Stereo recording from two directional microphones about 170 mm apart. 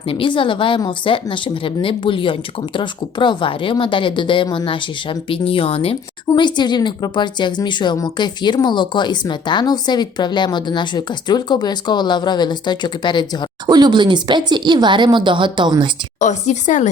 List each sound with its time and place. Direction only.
0.1 s speech: 30° left (ahead or behind)
13.7 s speech: 25° right (ahead or behind)
16.2 s speech: 45° left (ahead or behind)